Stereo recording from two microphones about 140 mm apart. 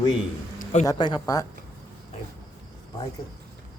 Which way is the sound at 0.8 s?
30° left (ahead or behind).